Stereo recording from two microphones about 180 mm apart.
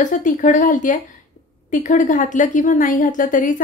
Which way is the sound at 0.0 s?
45° left (ahead or behind).